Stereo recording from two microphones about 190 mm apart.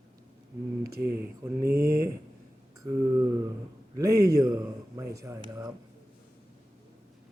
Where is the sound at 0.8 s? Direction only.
55° right (ahead or behind).